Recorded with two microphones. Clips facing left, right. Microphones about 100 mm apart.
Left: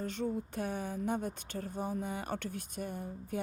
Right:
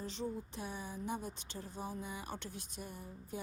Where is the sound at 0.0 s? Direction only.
55° left (ahead or behind).